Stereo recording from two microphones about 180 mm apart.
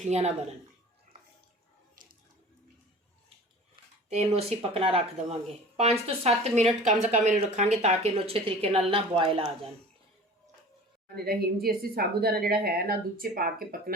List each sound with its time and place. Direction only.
0.1 s speech: 35° right (ahead or behind)
4.1 s speech: 35° right (ahead or behind)
11.1 s a woman's voice: 60° right (ahead or behind)